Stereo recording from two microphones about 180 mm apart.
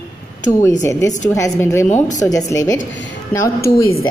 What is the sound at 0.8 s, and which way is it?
Speech, 15° left (ahead or behind).